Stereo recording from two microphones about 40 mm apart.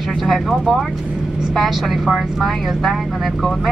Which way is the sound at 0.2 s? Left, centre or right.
Centre.